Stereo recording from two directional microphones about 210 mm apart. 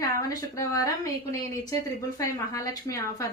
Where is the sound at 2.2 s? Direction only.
15° left (ahead or behind).